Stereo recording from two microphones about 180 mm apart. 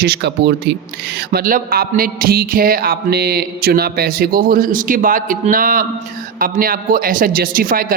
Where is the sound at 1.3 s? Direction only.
50° right (ahead or behind).